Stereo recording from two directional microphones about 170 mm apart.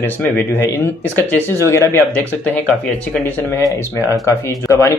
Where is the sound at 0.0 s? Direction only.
10° left (ahead or behind).